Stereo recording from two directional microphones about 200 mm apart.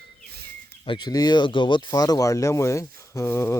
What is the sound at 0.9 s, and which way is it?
Speech, 20° left (ahead or behind).